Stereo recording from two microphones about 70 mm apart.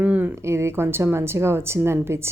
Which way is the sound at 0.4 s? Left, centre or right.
Right.